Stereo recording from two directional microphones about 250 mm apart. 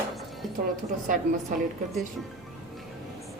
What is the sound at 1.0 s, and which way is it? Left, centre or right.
Speech, right.